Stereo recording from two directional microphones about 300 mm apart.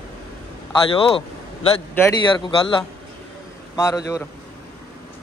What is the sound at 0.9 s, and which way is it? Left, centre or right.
Speech, centre.